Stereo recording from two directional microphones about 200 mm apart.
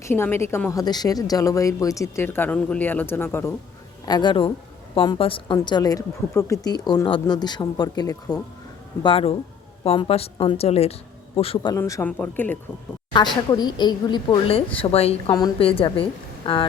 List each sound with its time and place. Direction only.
0.0 s a woman's voice: 10° left (ahead or behind)
4.0 s a woman's voice: 20° left (ahead or behind)
11.8 s a woman's voice: 10° left (ahead or behind)
13.1 s a woman's voice: 20° left (ahead or behind)